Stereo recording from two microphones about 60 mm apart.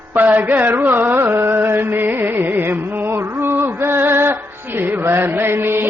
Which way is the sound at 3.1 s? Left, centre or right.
Right.